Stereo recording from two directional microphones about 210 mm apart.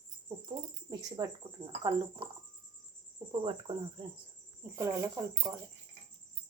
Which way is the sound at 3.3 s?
25° right (ahead or behind).